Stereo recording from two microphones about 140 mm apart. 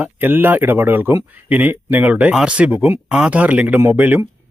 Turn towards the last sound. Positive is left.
turn(degrees=-15)  # may be behind; listen again after turning